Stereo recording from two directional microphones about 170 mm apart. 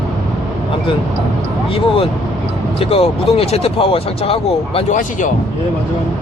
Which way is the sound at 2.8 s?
35° left (ahead or behind).